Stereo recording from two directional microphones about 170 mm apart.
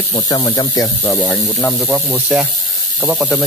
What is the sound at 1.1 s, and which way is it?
Speech, 5° left (ahead or behind).